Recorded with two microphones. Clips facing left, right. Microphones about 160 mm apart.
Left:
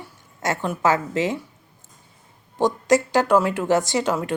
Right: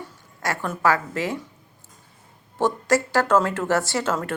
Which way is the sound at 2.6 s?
15° left (ahead or behind).